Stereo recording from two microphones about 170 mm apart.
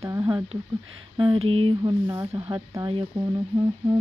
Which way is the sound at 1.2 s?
30° right (ahead or behind).